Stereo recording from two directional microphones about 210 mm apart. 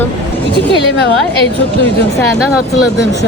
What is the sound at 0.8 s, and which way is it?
Speech, 50° left (ahead or behind).